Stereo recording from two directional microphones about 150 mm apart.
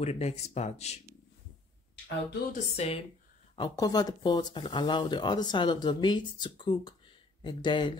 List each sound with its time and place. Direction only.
0.0 s speech: 45° left (ahead or behind)
2.5 s speech: 45° left (ahead or behind)
3.5 s speech: 25° left (ahead or behind)